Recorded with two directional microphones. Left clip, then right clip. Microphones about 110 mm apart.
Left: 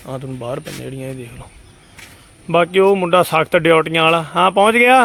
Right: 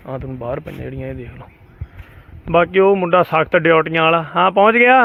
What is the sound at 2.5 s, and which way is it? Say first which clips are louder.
Speech: even; 25° left (ahead or behind).